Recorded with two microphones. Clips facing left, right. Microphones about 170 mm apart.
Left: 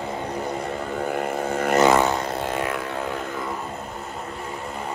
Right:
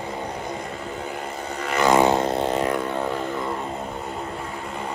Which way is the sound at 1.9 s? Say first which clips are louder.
Right 3 dB; 20° right (ahead or behind).